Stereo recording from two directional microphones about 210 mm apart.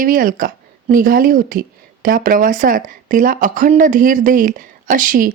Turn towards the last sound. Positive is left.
turn(degrees=-40)  # may be behind; listen again after turning